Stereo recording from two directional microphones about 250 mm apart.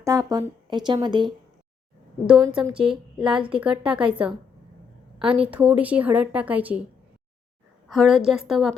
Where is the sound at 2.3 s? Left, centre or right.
Centre.